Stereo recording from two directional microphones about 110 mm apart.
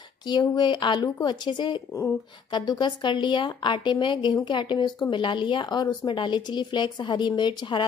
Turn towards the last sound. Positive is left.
turn(degrees=45)  # may be behind; listen again after turning